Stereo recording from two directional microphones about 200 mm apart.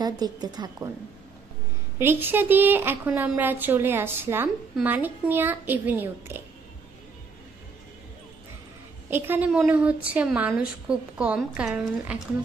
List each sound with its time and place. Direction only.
0.0 s a woman's voice: 20° right (ahead or behind)
2.0 s a woman's voice: 10° right (ahead or behind)
9.1 s a woman's voice: 10° right (ahead or behind)